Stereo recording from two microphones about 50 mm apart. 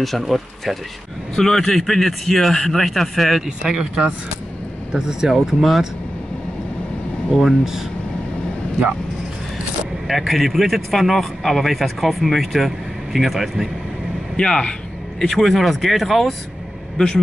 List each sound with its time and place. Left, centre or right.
0.0 s speech: centre
3.4 s speech: centre
7.3 s speech: centre
10.0 s speech: centre
14.3 s a sound: centre
15.2 s speech: centre
16.9 s a man's voice: centre